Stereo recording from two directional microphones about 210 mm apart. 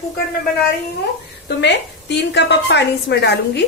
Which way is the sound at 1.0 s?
55° left (ahead or behind).